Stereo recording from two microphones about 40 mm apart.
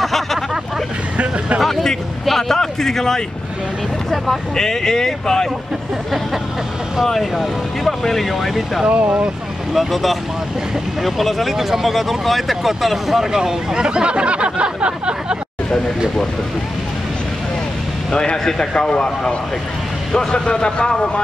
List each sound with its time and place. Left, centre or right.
0.0 s speech: centre
1.1 s speech: right
1.6 s speech: centre
4.6 s speech: centre
7.2 s speech: centre
8.8 s speech: right
9.8 s speech: centre; by 15.3 s right
18.1 s a man's voice: centre